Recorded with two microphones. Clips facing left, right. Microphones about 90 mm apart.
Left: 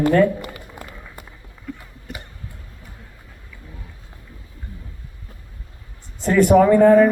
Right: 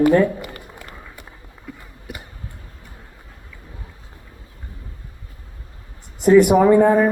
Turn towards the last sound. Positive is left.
turn(degrees=-15)  # may be behind; listen again after turning